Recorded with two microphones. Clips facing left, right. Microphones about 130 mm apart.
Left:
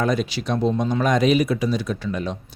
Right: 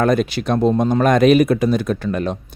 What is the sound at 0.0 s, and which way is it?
Speech, 55° right (ahead or behind).